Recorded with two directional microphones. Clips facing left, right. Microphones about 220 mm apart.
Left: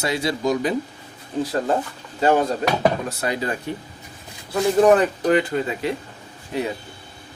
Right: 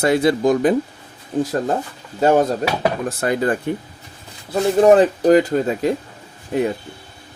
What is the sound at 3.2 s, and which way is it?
Speech, 50° right (ahead or behind).